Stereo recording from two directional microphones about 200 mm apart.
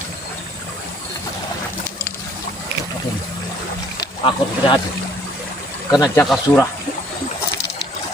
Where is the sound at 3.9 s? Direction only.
25° left (ahead or behind).